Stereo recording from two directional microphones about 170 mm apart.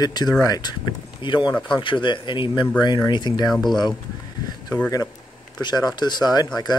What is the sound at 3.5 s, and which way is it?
Speech, centre (ahead or behind).